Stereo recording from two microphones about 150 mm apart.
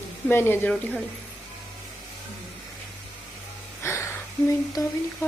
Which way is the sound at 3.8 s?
15° left (ahead or behind).